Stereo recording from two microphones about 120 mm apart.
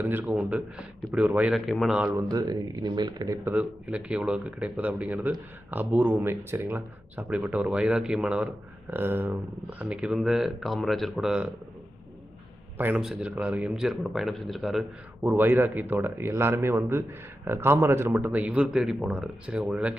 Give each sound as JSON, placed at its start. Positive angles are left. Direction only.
{"t": 0.0, "sound": "speech", "side_deg": -15}
{"t": 2.3, "sound": "speech", "side_deg": -35}
{"t": 3.5, "sound": "speech", "side_deg": -5}
{"t": 8.9, "sound": "speech", "side_deg": -15}
{"t": 12.7, "sound": "a man's voice", "side_deg": -15}
{"t": 15.3, "sound": "speech", "side_deg": -20}
{"t": 18.3, "sound": "speech", "side_deg": -10}